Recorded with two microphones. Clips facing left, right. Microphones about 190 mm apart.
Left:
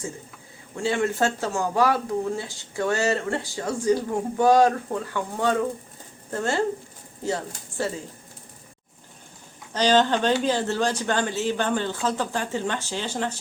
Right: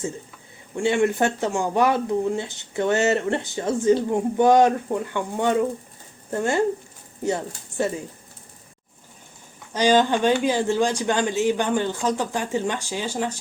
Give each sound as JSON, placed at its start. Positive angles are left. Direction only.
{"t": 0.8, "sound": "speech", "side_deg": -20}
{"t": 9.7, "sound": "speech", "side_deg": -10}